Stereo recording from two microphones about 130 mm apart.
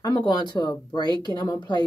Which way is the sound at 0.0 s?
35° left (ahead or behind).